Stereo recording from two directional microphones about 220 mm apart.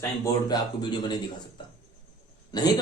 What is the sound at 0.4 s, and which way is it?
Speech, 20° left (ahead or behind).